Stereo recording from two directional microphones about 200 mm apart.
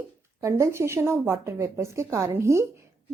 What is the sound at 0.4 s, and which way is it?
Speech, 15° right (ahead or behind).